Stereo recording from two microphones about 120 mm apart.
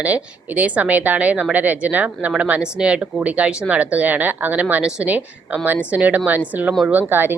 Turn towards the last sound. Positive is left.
turn(degrees=-15)  # may be behind; listen again after turning